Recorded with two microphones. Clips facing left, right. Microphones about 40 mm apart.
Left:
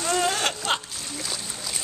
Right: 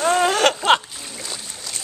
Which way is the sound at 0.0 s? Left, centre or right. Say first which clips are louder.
Right 7 dB; right.